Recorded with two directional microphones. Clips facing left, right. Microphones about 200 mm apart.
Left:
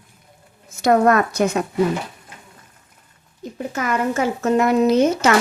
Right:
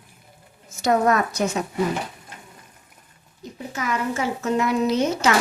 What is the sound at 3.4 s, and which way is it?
A woman's voice, 55° left (ahead or behind).